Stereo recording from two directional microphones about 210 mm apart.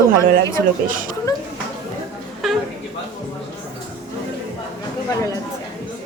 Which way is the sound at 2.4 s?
Centre (ahead or behind).